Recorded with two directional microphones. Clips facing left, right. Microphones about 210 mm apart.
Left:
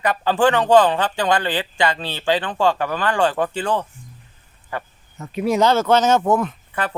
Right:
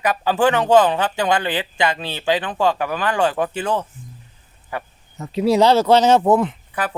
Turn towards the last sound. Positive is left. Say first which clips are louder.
# even
turn(degrees=0)  # may be behind; listen again after turning